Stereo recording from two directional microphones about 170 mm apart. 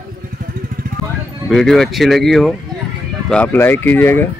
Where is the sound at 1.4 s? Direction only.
Centre (ahead or behind).